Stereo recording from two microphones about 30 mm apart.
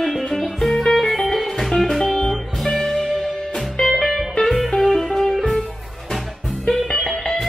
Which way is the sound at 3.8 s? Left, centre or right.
Left.